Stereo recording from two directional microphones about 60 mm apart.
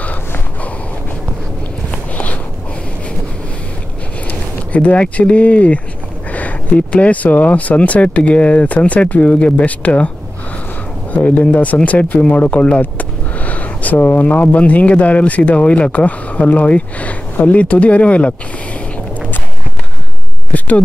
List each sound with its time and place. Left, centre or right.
1.9 s walk: left
4.3 s speech: left
11.1 s speech: left
12.2 s a sound: left
14.2 s speech: left
20.5 s speech: left